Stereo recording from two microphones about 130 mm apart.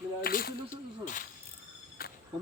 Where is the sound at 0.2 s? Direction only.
90° left.